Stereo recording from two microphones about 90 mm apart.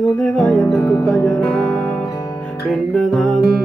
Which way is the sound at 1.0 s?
5° left (ahead or behind).